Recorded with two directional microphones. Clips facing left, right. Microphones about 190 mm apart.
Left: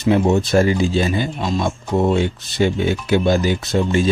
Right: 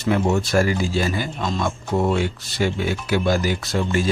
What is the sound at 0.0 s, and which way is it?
Speech, 20° left (ahead or behind).